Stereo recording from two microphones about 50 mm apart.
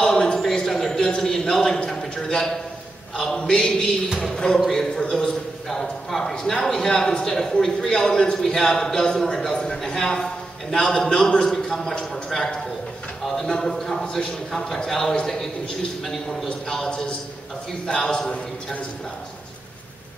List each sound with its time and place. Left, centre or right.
0.0 s a sound: centre
3.3 s a man's voice: centre
12.3 s a man's voice: centre
16.6 s a man's voice: centre